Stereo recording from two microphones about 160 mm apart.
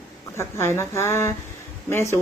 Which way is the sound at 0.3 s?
15° left (ahead or behind).